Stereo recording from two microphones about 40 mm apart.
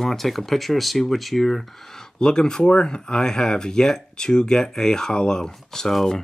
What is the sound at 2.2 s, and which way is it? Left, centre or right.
Speech, centre.